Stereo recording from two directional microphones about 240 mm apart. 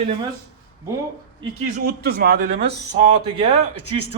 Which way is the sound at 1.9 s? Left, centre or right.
Right.